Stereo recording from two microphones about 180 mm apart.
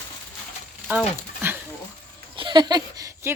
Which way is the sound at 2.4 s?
25° right (ahead or behind).